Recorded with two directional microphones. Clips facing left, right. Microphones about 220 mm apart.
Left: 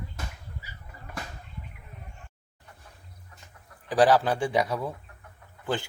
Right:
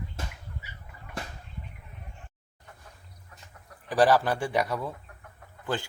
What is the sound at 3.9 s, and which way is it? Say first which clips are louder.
Speech: left 1 dB; 15° left (ahead or behind).